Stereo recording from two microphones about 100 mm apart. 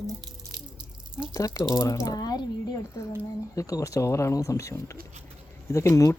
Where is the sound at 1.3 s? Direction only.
30° left (ahead or behind).